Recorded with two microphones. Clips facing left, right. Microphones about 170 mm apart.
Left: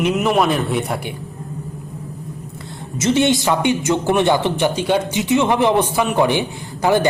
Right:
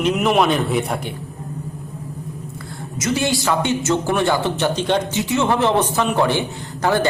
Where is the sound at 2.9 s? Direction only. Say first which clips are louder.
Left 5 dB; 25° left (ahead or behind).